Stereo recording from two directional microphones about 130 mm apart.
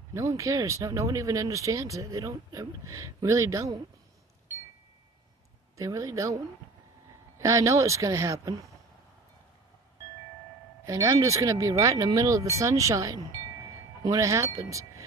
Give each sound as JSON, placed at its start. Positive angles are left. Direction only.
{"t": 0.1, "sound": "speech", "side_deg": -25}
{"t": 5.8, "sound": "speech", "side_deg": -25}
{"t": 7.4, "sound": "speech", "side_deg": -25}
{"t": 10.9, "sound": "speech", "side_deg": -25}